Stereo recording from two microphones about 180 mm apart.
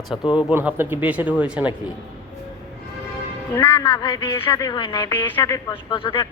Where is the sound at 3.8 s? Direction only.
25° left (ahead or behind).